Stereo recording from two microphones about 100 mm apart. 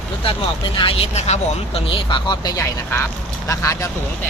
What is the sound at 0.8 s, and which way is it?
Speech, 80° left.